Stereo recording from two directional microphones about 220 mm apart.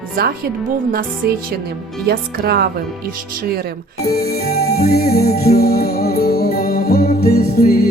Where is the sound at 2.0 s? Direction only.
45° right (ahead or behind).